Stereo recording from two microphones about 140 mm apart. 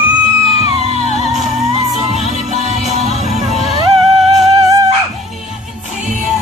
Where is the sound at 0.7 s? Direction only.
50° right (ahead or behind).